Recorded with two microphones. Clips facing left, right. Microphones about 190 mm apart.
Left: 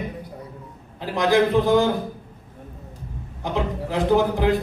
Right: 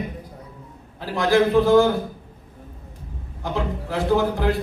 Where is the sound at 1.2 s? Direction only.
20° left (ahead or behind).